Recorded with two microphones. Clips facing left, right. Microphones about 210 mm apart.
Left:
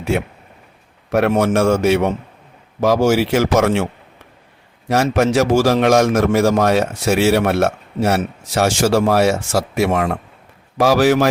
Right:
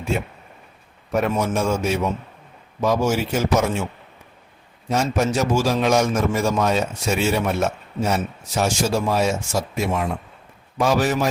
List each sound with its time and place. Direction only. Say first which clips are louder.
0.1 s a man's voice: left 5 dB; 70° left (ahead or behind)
4.9 s a man's voice: left 5 dB; 70° left (ahead or behind)